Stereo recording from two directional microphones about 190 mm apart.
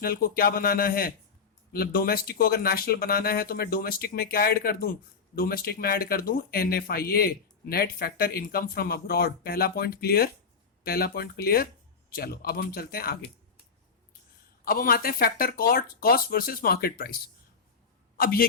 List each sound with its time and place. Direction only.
0.0 s speech: 50° left (ahead or behind)
14.6 s speech: 50° left (ahead or behind)
18.2 s a man's voice: 50° left (ahead or behind)